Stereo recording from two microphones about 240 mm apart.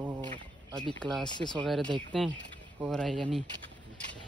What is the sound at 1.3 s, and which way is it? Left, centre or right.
Speech, centre.